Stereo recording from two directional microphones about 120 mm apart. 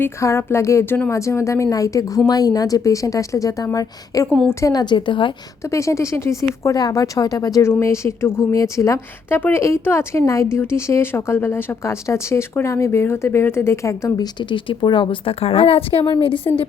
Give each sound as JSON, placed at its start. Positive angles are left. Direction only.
{"t": 0.0, "sound": "a woman's voice", "side_deg": 25}
{"t": 5.7, "sound": "speech", "side_deg": 25}
{"t": 14.3, "sound": "a woman's voice", "side_deg": 40}